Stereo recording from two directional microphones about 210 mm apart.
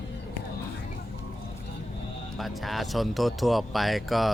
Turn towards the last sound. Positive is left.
turn(degrees=0)  # may be behind; listen again after turning